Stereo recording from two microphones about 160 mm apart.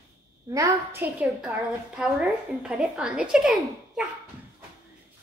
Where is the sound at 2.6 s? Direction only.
5° right (ahead or behind).